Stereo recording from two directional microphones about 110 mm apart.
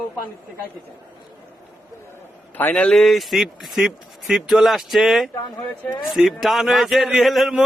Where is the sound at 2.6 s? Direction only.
15° left (ahead or behind).